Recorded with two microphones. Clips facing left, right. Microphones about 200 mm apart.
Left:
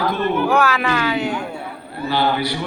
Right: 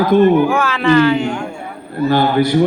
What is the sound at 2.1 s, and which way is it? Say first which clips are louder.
Speech: right 6 dB; 50° right (ahead or behind).